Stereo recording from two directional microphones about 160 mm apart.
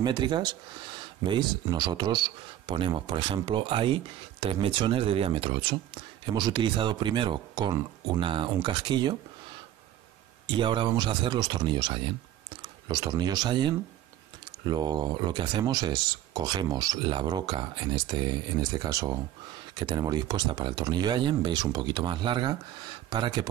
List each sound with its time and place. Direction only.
0.0 s speech: 30° right (ahead or behind)
10.4 s speech: 30° right (ahead or behind)